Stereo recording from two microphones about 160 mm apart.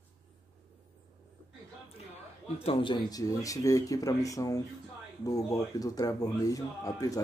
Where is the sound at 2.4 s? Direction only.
35° left (ahead or behind).